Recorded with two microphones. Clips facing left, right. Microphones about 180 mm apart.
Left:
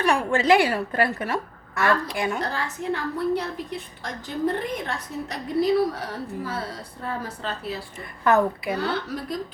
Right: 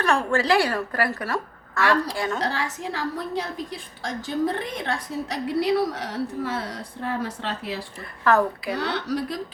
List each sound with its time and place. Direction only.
0.0 s a woman's voice: 15° left (ahead or behind)
2.4 s a woman's voice: 85° right
8.2 s a woman's voice: 20° left (ahead or behind)
8.8 s a woman's voice: 85° right